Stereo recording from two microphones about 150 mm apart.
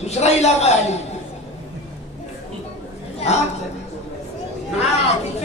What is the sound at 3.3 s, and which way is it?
Speech, 45° left (ahead or behind).